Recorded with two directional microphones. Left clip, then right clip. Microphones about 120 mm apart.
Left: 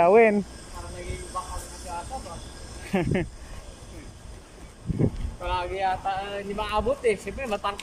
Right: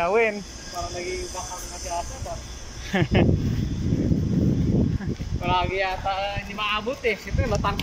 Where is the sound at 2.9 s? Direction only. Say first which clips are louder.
Right 2 dB; 20° left (ahead or behind).